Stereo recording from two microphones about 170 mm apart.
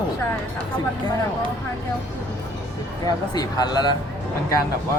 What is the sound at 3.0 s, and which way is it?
Speech, 25° left (ahead or behind).